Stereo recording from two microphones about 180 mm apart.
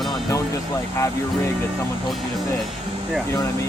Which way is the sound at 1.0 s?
15° left (ahead or behind).